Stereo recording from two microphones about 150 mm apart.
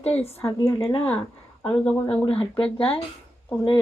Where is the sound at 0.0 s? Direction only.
40° left (ahead or behind).